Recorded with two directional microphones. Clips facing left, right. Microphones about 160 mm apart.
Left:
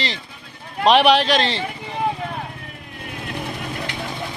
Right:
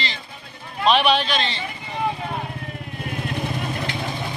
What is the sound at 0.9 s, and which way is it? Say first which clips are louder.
Speech: left 4 dB; 90° left.